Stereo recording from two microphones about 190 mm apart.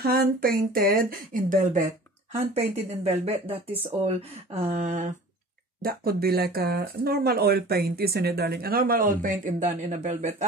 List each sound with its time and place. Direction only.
0.0 s speech: 50° right (ahead or behind)
2.3 s speech: 30° right (ahead or behind)
5.8 s speech: 50° right (ahead or behind); by 10.3 s 35° right (ahead or behind)